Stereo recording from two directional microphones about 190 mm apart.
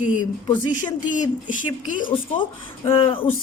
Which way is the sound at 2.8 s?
30° left (ahead or behind).